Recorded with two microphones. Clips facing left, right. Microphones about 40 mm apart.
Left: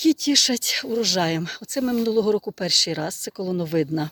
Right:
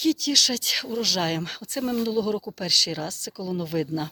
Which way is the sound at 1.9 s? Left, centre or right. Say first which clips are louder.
Left 5 dB; centre.